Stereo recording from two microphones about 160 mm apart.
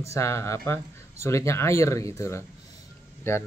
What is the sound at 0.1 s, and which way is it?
Speech, 15° left (ahead or behind).